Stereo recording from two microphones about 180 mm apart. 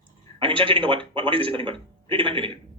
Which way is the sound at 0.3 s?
30° right (ahead or behind).